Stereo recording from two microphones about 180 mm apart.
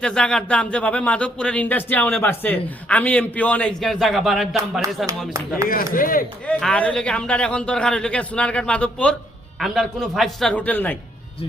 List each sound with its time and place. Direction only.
0.0 s a man's voice: 5° left (ahead or behind)
5.6 s speech: 50° left (ahead or behind)
6.5 s a man's voice: 5° left (ahead or behind)